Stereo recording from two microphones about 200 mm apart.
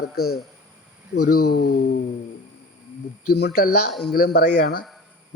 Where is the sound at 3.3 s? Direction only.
55° left (ahead or behind).